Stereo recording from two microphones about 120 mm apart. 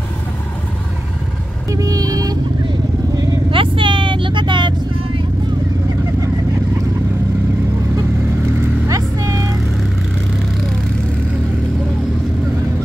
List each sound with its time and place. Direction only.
1.7 s vehicle: 30° right (ahead or behind)
3.5 s vehicle: 45° right (ahead or behind)
8.8 s vehicle: 30° right (ahead or behind)